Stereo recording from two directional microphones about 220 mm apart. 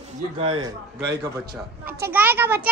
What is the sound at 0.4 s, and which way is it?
Speech, 25° right (ahead or behind).